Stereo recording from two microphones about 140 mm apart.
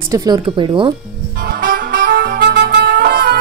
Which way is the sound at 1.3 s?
90° right.